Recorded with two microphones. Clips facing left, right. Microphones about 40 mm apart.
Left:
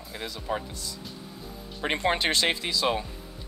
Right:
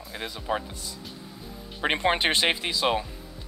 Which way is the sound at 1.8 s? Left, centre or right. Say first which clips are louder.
Right 2 dB; right.